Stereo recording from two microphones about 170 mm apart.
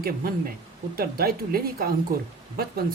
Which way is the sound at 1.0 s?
60° right (ahead or behind).